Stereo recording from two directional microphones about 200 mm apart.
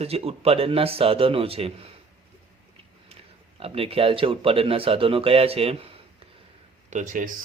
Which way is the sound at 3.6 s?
30° right (ahead or behind).